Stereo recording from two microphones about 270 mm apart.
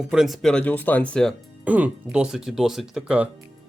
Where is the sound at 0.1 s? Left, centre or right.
Centre.